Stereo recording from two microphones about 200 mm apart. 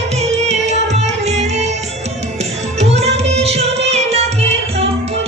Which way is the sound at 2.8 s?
30° right (ahead or behind).